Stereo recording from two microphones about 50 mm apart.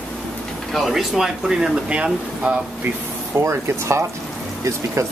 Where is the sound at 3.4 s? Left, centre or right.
Right.